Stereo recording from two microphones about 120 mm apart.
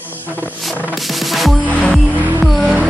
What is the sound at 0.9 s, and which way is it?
Music, centre (ahead or behind).